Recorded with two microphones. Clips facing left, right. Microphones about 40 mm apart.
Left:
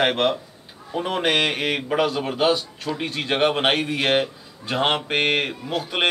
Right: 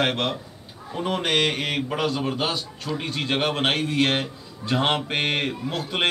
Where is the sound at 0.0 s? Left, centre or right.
Centre.